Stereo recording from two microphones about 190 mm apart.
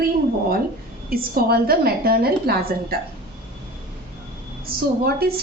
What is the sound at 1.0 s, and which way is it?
A woman's voice, 50° right (ahead or behind).